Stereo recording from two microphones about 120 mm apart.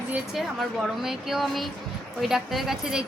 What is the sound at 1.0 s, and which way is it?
A woman's voice, 5° right (ahead or behind).